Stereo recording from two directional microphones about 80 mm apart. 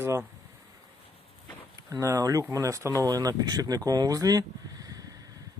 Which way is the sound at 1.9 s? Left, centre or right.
Right.